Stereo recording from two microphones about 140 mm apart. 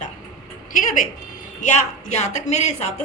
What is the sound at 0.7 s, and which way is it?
A woman's voice, 65° left (ahead or behind).